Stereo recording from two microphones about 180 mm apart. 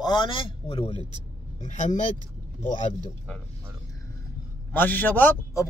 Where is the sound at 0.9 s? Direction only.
25° right (ahead or behind).